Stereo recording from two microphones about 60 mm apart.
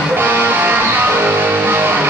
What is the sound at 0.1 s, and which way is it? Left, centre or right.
Music, right.